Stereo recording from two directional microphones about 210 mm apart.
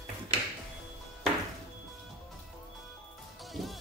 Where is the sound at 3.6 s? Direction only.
Centre (ahead or behind).